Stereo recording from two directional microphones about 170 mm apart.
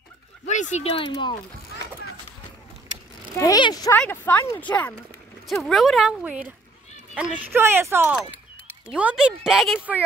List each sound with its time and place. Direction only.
0.5 s speech: 45° left (ahead or behind)
0.9 s speech: 25° left (ahead or behind)
3.3 s speech: 20° left (ahead or behind)
3.9 s speech: 10° left (ahead or behind); by 10.0 s 10° right (ahead or behind)